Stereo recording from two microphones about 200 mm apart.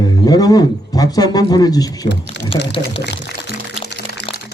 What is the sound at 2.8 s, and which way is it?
Speech, 60° left (ahead or behind).